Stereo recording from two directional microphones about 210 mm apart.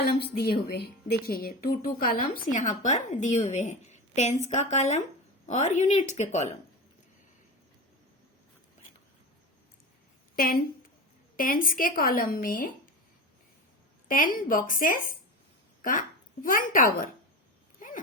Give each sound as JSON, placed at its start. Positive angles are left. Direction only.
{"t": 0.0, "sound": "a woman's voice", "side_deg": 50}
{"t": 10.3, "sound": "a woman's voice", "side_deg": 45}
{"t": 14.1, "sound": "speech", "side_deg": 40}
{"t": 17.7, "sound": "dog", "side_deg": 40}